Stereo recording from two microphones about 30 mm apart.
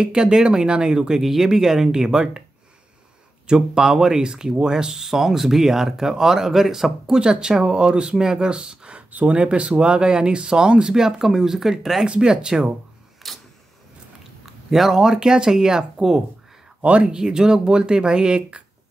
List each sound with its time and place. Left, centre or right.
0.0 s speech: right
1.2 s speech: centre
3.4 s speech: right
7.2 s speech: right
9.3 s speech: right
9.7 s speech: right; by 11.7 s centre
12.1 s speech: right
13.2 s camera: centre
14.4 s speech: centre; by 18.6 s right